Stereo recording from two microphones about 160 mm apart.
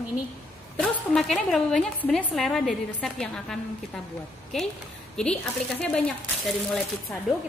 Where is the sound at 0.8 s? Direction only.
Centre (ahead or behind).